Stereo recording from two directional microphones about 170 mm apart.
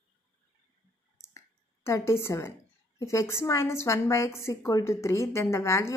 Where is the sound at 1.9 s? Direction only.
15° left (ahead or behind).